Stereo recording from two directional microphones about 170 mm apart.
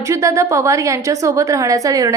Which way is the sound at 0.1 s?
20° right (ahead or behind).